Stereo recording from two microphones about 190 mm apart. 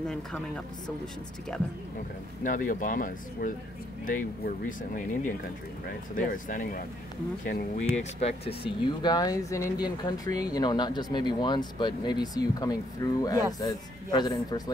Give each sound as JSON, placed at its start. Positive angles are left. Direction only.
{"t": 1.5, "sound": "speech", "side_deg": 5}
{"t": 2.4, "sound": "speech", "side_deg": 45}
{"t": 4.6, "sound": "speech", "side_deg": 45}
{"t": 7.9, "sound": "speech", "side_deg": 35}